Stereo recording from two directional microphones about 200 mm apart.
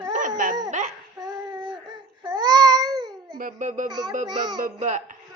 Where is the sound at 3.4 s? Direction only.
40° right (ahead or behind).